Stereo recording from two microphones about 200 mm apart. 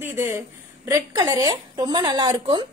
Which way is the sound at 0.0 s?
10° right (ahead or behind).